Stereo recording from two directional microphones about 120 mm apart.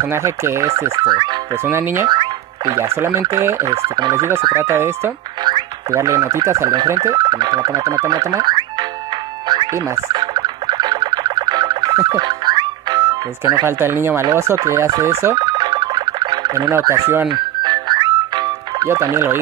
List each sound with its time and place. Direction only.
0.0 s speech: 20° right (ahead or behind)
1.7 s speech: 20° right (ahead or behind)
2.0 s music: 35° right (ahead or behind)
2.8 s speech: 20° right (ahead or behind)
5.4 s a sound: 35° right (ahead or behind)
5.9 s speech: 25° right (ahead or behind)
9.5 s music: 35° right (ahead or behind)
13.7 s speech: 20° right (ahead or behind)
15.3 s car alarm: 35° right (ahead or behind)
17.3 s music: 40° right (ahead or behind)
18.9 s speech: 25° right (ahead or behind)